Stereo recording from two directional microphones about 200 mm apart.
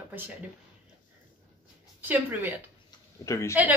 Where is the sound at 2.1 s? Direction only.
10° right (ahead or behind).